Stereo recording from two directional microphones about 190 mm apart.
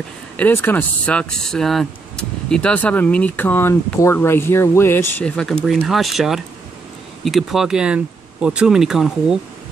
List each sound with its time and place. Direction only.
0.4 s speech: 10° left (ahead or behind)